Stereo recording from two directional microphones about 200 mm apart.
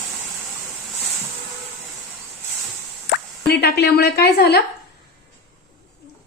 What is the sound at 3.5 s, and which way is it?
A woman's voice, 55° left (ahead or behind).